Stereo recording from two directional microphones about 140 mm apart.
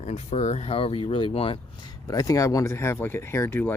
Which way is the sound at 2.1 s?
25° left (ahead or behind).